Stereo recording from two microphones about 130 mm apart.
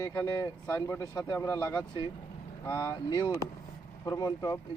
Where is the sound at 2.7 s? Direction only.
30° left (ahead or behind).